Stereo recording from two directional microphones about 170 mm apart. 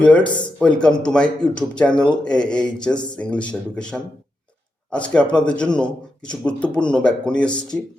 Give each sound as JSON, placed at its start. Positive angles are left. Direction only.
{"t": 0.0, "sound": "speech", "side_deg": 5}